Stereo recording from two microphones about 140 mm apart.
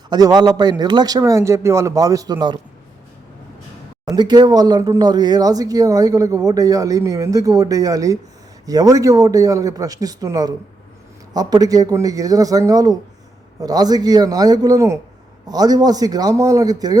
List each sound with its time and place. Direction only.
0.1 s speech: 30° right (ahead or behind)
4.1 s speech: 30° right (ahead or behind)